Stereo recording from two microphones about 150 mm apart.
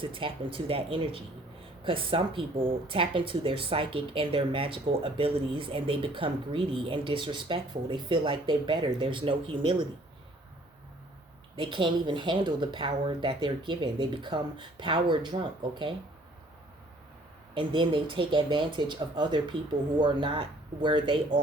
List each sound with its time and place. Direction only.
0.0 s speech: 35° right (ahead or behind)
11.5 s speech: 35° right (ahead or behind)
17.5 s speech: 35° right (ahead or behind)